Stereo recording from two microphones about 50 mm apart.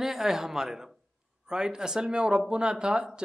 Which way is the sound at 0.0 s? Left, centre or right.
Centre.